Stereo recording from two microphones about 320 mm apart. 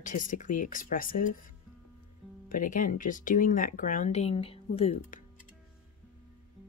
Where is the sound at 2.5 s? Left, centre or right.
Left.